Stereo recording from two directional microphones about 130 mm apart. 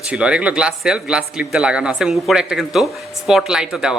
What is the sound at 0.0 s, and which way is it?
Speech, 10° right (ahead or behind).